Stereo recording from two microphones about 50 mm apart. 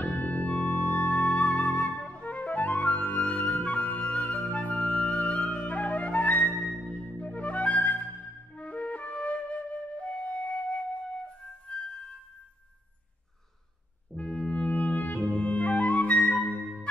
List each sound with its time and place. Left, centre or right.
0.0 s music: left
1.6 s flute: left
6.9 s music: left
8.5 s flute: left
11.7 s music: centre
14.1 s music: left